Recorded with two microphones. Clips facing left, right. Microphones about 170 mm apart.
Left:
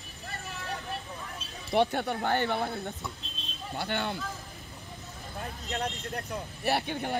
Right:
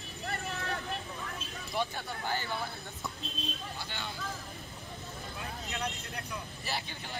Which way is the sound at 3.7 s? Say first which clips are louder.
Left 9 dB; 60° left (ahead or behind).